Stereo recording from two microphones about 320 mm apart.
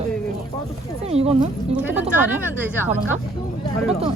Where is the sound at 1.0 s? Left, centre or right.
Centre.